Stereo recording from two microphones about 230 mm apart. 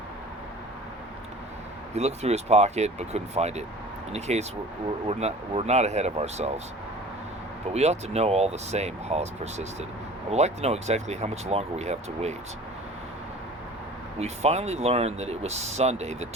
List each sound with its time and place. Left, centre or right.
1.9 s speech: right
7.7 s speech: right
14.2 s speech: right